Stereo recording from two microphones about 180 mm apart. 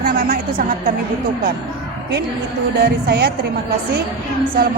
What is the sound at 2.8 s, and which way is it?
Speech, 65° right (ahead or behind).